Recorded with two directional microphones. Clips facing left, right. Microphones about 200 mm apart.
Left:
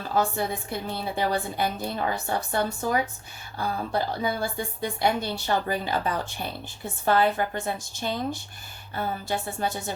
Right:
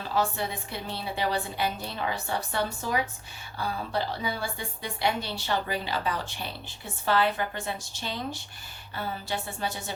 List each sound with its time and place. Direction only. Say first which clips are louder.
0.1 s a woman's voice: left 3 dB; 45° left (ahead or behind)